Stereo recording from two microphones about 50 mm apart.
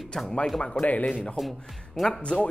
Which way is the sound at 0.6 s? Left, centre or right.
Left.